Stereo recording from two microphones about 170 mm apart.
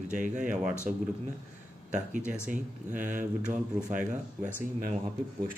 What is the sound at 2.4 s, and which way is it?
Speech, 50° right (ahead or behind).